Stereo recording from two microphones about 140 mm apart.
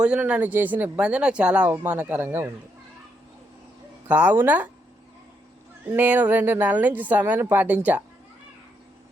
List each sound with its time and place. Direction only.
0.0 s speech: 5° right (ahead or behind)
4.1 s speech: 10° right (ahead or behind)
5.9 s speech: 10° right (ahead or behind)